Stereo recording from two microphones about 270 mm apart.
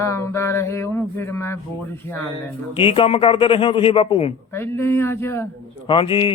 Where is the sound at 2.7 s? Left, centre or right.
Centre.